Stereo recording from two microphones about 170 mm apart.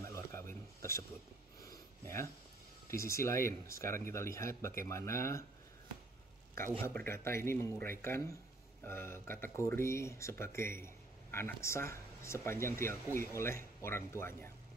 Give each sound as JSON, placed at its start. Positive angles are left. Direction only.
{"t": 0.0, "sound": "a sound", "side_deg": 15}
{"t": 2.9, "sound": "speech", "side_deg": 15}
{"t": 6.8, "sound": "speech", "side_deg": 10}